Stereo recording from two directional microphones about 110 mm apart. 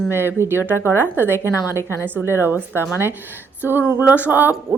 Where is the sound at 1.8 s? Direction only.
25° left (ahead or behind).